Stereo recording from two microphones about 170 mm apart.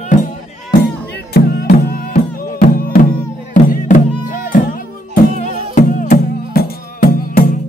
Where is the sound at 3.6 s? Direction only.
50° left (ahead or behind).